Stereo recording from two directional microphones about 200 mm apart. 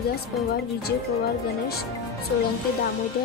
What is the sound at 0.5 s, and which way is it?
Speech, 50° left (ahead or behind).